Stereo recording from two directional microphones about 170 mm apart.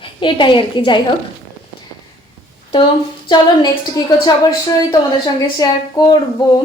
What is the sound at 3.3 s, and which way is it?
A woman's voice, 25° left (ahead or behind).